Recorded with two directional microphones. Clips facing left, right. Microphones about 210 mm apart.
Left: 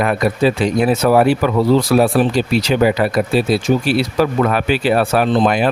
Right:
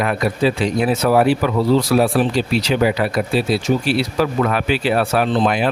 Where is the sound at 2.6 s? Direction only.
45° left (ahead or behind).